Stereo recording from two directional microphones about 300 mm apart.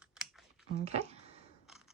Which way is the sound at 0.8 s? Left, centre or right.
Right.